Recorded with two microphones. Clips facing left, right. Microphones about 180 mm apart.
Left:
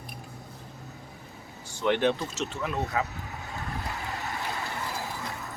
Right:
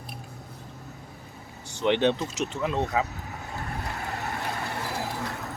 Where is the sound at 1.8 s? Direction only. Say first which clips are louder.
Right 2 dB; 20° right (ahead or behind).